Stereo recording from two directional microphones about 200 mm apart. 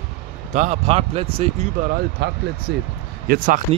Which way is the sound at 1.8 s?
50° right (ahead or behind).